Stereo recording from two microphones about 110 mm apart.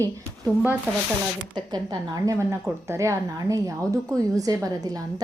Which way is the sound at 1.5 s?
45° right (ahead or behind).